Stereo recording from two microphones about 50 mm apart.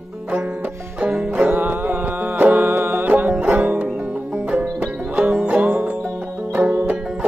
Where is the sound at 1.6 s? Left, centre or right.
Right.